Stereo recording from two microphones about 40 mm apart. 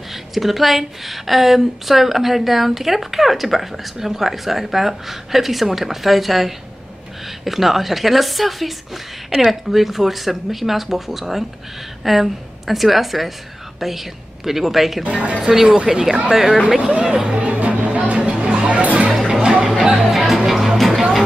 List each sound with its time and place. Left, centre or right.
0.1 s a woman's voice: centre
15.0 s a woman's voice: right
15.5 s a woman's voice: centre
17.4 s music: right
18.4 s music: right
18.8 s music: right
20.0 s music: centre